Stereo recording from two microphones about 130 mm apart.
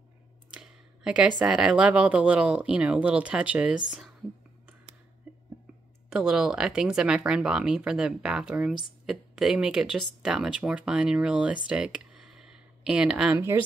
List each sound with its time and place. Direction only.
0.5 s a sound: 10° right (ahead or behind)
1.4 s speech: 5° right (ahead or behind)
6.0 s speech: 5° right (ahead or behind)